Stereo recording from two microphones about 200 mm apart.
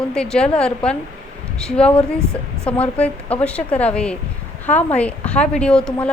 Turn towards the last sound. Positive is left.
turn(degrees=5)  # may be behind; listen again after turning